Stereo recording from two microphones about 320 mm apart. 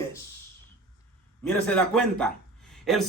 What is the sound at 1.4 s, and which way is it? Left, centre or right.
Speech, centre.